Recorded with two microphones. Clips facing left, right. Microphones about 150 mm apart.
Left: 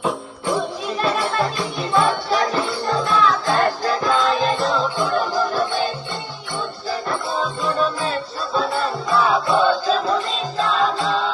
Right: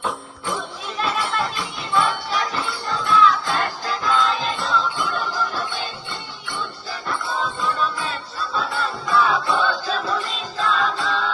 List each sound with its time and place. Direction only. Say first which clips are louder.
0.4 s music: left 7 dB; 40° left (ahead or behind)
7.7 s music: left 4 dB; 35° left (ahead or behind)